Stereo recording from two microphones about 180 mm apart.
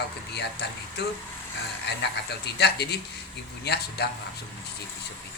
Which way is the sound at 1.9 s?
70° left (ahead or behind).